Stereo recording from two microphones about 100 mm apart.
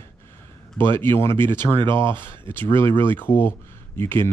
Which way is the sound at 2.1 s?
20° left (ahead or behind).